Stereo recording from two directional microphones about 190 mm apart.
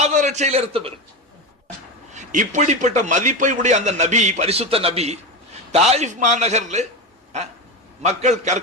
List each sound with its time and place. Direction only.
0.0 s a man's voice: 40° right (ahead or behind)
2.1 s a man's voice: 40° right (ahead or behind)
8.0 s a man's voice: 40° right (ahead or behind)